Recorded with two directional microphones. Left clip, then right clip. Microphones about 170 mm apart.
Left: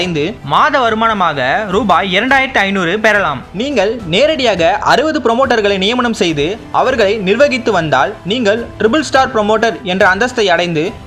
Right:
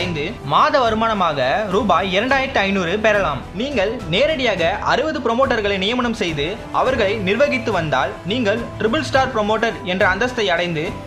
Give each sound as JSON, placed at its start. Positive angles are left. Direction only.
{"t": 0.0, "sound": "speech", "side_deg": 40}
{"t": 0.5, "sound": "speech", "side_deg": 20}
{"t": 3.6, "sound": "speech", "side_deg": 35}